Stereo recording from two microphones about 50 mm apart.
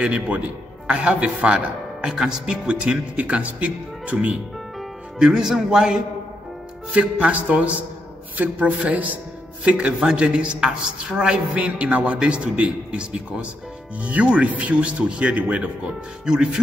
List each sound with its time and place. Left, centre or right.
0.0 s a woman's voice: right
5.2 s speech: centre
6.9 s a woman's voice: right
9.7 s a woman's voice: right